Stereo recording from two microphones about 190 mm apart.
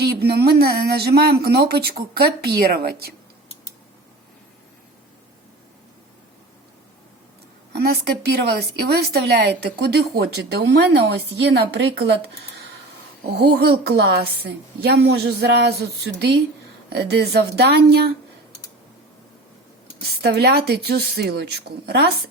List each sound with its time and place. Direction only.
0.0 s speech: 60° right (ahead or behind)
7.7 s speech: 60° right (ahead or behind)
20.0 s speech: 60° right (ahead or behind)